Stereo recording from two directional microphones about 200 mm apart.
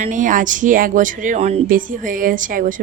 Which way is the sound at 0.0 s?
40° right (ahead or behind).